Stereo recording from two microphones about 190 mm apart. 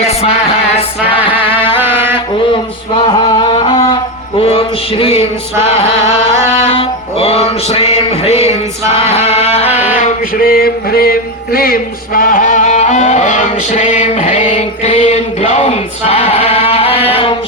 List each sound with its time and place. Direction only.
0.0 s music: 35° left (ahead or behind)
1.7 s mantra: 10° right (ahead or behind)
3.1 s music: 25° left (ahead or behind)
4.4 s a sound: 30° left (ahead or behind)
6.7 s music: 30° left (ahead or behind)
9.7 s mantra: 40° left (ahead or behind)